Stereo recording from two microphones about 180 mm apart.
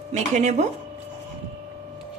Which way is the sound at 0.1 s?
40° right (ahead or behind).